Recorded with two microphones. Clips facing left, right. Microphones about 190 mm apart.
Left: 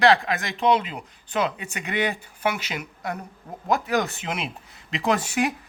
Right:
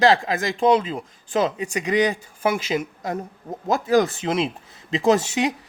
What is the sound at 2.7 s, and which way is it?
Speech, 25° right (ahead or behind).